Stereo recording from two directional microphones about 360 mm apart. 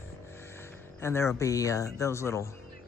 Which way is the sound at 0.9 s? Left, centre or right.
Centre.